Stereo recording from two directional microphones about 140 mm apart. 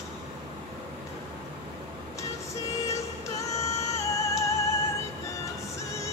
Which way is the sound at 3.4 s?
20° left (ahead or behind).